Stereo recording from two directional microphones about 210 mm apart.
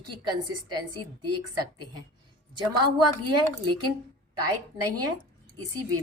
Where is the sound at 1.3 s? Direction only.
90° right.